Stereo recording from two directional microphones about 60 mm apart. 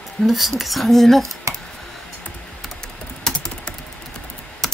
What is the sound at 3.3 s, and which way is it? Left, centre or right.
Typing, centre.